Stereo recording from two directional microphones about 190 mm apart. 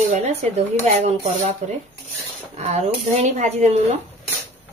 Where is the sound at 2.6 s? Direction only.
35° right (ahead or behind).